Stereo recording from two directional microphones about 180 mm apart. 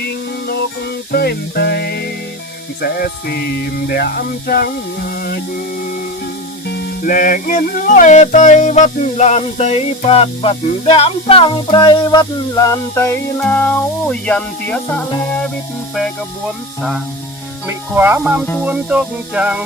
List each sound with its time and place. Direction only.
0.0 s music: 65° left (ahead or behind)
6.7 s music: 65° left (ahead or behind); by 15.0 s 5° left (ahead or behind)
17.7 s music: 10° right (ahead or behind)